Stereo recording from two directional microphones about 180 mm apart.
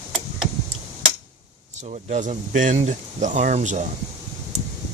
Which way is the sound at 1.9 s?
40° right (ahead or behind).